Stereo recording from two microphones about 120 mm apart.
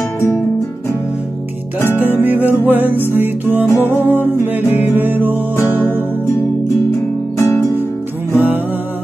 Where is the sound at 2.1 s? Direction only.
15° right (ahead or behind).